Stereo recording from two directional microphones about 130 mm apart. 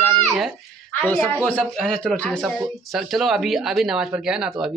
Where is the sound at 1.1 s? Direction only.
5° left (ahead or behind).